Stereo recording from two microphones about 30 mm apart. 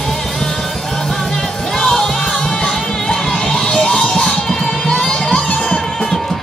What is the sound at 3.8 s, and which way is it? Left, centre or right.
Music, left.